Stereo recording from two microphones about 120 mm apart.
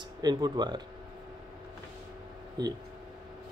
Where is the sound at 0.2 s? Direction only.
35° right (ahead or behind).